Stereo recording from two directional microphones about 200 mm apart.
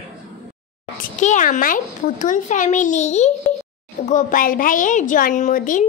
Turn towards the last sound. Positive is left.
turn(degrees=40)  # may be behind; listen again after turning